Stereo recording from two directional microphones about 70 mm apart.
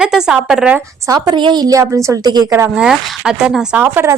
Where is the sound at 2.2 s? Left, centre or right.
Right.